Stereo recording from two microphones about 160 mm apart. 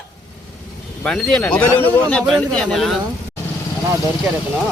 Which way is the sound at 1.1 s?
5° left (ahead or behind).